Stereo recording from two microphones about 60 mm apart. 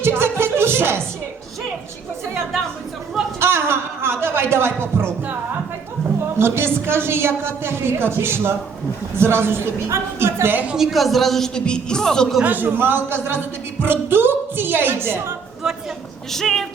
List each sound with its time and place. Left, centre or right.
0.0 s music: right
3.4 s a sound: right
6.4 s a woman's voice: right
10.8 s a man's voice: centre
12.4 s a woman's voice: right
15.6 s speech: centre
16.3 s a man's voice: centre